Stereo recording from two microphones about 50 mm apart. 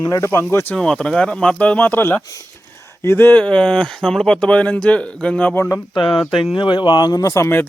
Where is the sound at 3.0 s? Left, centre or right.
Left.